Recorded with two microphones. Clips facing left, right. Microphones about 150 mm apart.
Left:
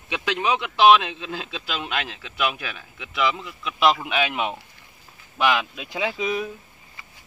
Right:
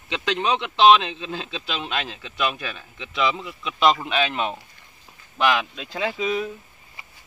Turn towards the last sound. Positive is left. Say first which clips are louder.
# right 1 dB
turn(degrees=10)  # may be behind; listen again after turning